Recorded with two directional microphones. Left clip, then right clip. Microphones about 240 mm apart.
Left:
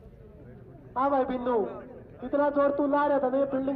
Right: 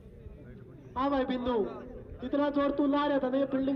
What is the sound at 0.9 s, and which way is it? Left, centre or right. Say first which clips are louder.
A man's voice: left 4 dB; right.